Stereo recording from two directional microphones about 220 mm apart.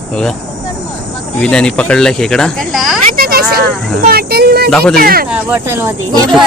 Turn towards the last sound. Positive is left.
turn(degrees=-10)  # may be behind; listen again after turning